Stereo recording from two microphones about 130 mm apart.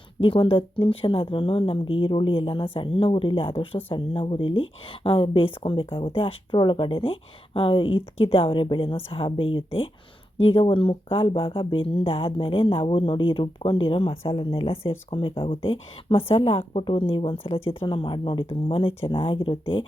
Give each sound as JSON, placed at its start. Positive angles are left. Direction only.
{"t": 0.2, "sound": "speech", "side_deg": 45}